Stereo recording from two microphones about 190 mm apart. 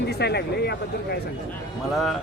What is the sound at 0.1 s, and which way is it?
Speech, 60° left (ahead or behind).